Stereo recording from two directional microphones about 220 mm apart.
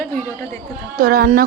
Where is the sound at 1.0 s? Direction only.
40° right (ahead or behind).